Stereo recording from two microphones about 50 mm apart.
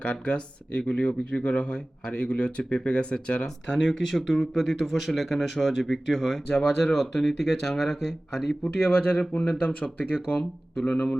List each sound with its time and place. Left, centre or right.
0.0 s speech: left; by 8.5 s centre
8.9 s speech: left; by 11.1 s centre